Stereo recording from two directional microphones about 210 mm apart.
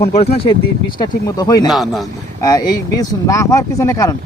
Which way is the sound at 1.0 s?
20° left (ahead or behind).